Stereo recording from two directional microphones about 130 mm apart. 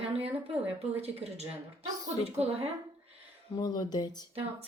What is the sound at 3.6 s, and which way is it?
Speech, 30° left (ahead or behind).